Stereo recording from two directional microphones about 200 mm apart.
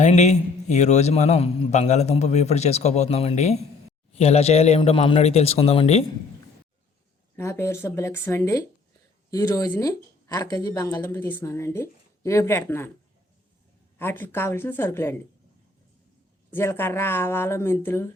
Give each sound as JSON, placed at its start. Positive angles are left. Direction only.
{"t": 0.0, "sound": "a man's voice", "side_deg": 35}
{"t": 7.3, "sound": "speech", "side_deg": 10}
{"t": 14.0, "sound": "speech", "side_deg": 10}
{"t": 16.5, "sound": "speech", "side_deg": 10}